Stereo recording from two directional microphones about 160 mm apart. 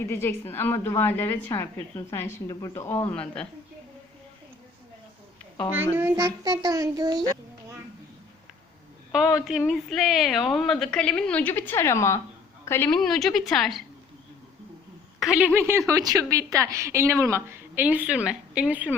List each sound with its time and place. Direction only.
0.0 s a woman's voice: 15° left (ahead or behind)
5.7 s child singing: 10° right (ahead or behind)
9.4 s a woman's voice: centre (ahead or behind)
15.2 s a woman's voice: 5° right (ahead or behind)